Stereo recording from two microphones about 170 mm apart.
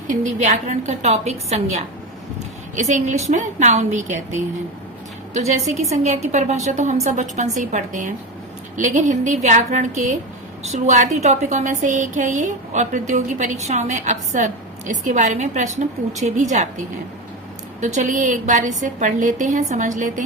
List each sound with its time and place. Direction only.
0.1 s a woman's voice: 45° right (ahead or behind)
17.7 s a woman's voice: 45° right (ahead or behind)